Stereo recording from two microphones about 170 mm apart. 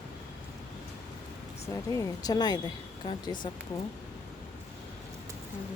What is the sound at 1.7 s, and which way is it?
Speech, 20° left (ahead or behind).